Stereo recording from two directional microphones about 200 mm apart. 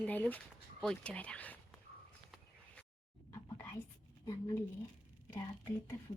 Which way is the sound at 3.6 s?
10° left (ahead or behind).